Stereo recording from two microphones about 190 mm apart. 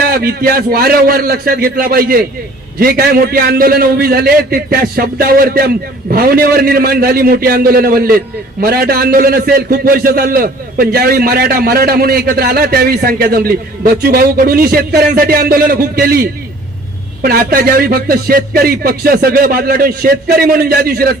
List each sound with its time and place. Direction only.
0.0 s a man's voice: 55° right (ahead or behind)